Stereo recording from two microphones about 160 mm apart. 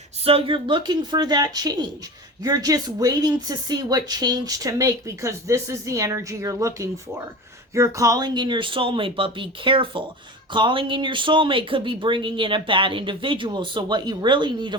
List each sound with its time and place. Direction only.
0.3 s speech: 35° right (ahead or behind)